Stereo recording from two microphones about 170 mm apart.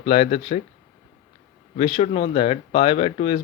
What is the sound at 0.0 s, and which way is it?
Speech, 35° left (ahead or behind).